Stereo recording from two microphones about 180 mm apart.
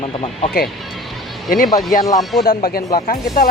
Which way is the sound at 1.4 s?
50° left (ahead or behind).